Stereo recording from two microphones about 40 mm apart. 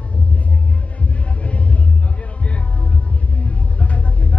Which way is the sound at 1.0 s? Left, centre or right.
Left.